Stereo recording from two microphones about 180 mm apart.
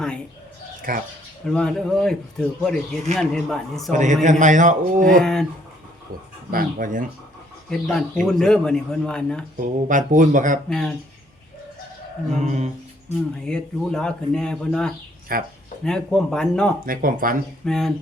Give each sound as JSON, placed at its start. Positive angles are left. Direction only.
{"t": 0.9, "sound": "a man's voice", "side_deg": -50}
{"t": 1.5, "sound": "speech", "side_deg": 5}
{"t": 3.9, "sound": "a man's voice", "side_deg": -45}
{"t": 5.2, "sound": "speech", "side_deg": 5}
{"t": 6.5, "sound": "a man's voice", "side_deg": -50}
{"t": 7.7, "sound": "speech", "side_deg": 0}
{"t": 9.6, "sound": "a man's voice", "side_deg": -45}
{"t": 10.7, "sound": "speech", "side_deg": 5}
{"t": 12.4, "sound": "speech", "side_deg": -40}
{"t": 13.4, "sound": "speech", "side_deg": 5}
{"t": 15.3, "sound": "a man's voice", "side_deg": -50}
{"t": 15.8, "sound": "speech", "side_deg": 5}
{"t": 16.8, "sound": "a man's voice", "side_deg": -50}
{"t": 17.7, "sound": "speech", "side_deg": 0}